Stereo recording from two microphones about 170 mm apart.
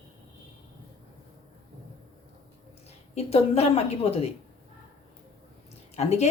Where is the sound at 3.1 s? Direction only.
35° left (ahead or behind).